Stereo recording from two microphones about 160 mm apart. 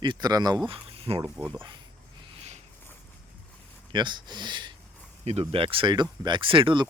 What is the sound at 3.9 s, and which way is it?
Speech, 30° right (ahead or behind).